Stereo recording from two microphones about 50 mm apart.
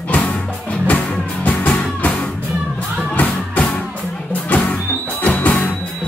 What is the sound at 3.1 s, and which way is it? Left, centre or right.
Music, left.